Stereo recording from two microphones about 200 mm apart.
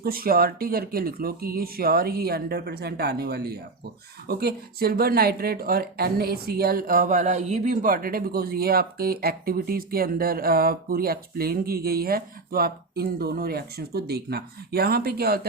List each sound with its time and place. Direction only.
0.0 s speech: 50° right (ahead or behind)